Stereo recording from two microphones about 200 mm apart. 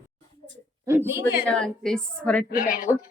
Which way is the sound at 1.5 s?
5° left (ahead or behind).